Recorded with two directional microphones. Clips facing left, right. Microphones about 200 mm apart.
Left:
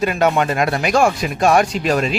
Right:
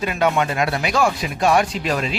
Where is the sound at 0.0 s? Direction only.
45° left (ahead or behind).